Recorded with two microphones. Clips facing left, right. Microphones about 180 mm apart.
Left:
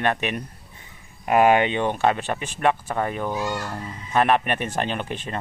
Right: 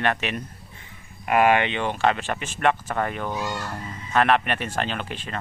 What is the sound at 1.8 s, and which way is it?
Speech, 15° left (ahead or behind).